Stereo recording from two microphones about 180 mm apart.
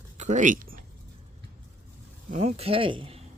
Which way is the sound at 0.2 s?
45° right (ahead or behind).